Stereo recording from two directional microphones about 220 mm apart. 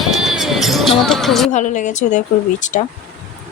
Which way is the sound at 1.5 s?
35° left (ahead or behind).